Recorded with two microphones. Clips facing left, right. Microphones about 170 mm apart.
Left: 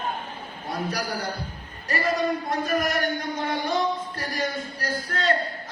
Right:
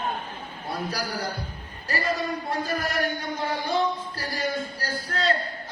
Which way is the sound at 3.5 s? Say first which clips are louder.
Even; 30° right (ahead or behind).